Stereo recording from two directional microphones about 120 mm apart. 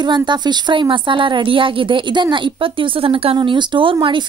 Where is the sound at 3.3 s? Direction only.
40° right (ahead or behind).